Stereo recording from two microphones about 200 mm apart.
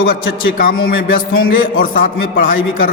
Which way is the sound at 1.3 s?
85° left.